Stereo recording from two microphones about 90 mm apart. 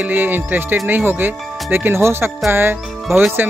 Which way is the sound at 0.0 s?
20° right (ahead or behind).